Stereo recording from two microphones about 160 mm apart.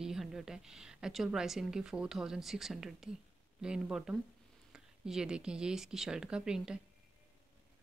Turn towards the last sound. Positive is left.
turn(degrees=-5)  # may be behind; listen again after turning